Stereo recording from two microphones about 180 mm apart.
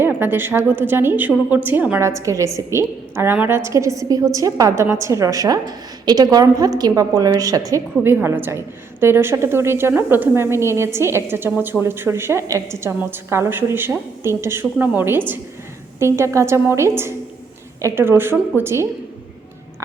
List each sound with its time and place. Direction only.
0.0 s a woman's voice: 10° right (ahead or behind)